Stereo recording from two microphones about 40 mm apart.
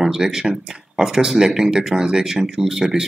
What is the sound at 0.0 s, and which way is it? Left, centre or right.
Speech, centre.